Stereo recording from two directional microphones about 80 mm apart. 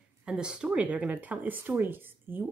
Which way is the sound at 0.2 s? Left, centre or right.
Centre.